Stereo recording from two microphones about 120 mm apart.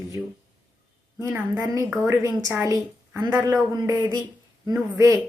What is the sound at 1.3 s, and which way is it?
Speech, 15° right (ahead or behind).